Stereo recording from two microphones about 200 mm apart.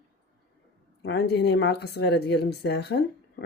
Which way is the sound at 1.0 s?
55° left (ahead or behind).